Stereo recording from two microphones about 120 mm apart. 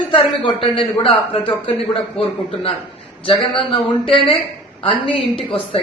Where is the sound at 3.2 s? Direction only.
45° left (ahead or behind).